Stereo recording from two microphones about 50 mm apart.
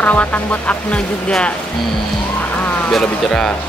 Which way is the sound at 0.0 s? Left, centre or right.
Left.